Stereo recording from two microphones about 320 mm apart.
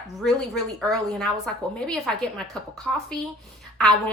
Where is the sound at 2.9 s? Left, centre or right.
Centre.